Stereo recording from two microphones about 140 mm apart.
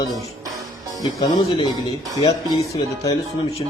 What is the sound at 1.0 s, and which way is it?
Speech, 30° left (ahead or behind).